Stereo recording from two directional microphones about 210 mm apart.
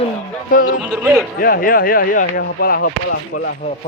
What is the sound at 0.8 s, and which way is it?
Speech, 5° right (ahead or behind).